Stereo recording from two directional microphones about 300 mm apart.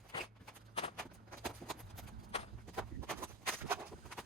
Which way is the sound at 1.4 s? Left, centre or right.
Centre.